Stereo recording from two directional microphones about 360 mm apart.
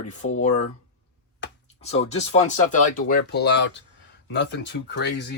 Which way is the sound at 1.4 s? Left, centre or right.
Left.